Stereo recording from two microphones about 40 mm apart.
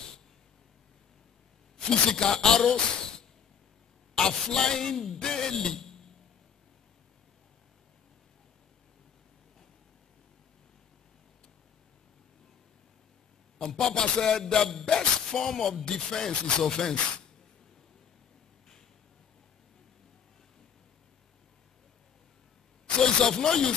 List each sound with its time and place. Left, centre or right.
1.9 s music: centre
13.6 s music: centre
15.8 s speech: centre
22.9 s music: centre